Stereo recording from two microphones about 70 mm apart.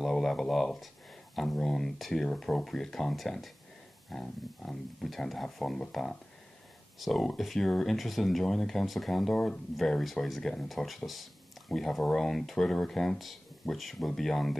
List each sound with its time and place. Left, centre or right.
0.0 s speech: centre